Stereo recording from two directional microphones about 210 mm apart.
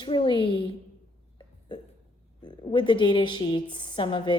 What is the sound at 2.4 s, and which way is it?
A woman's voice, 20° left (ahead or behind).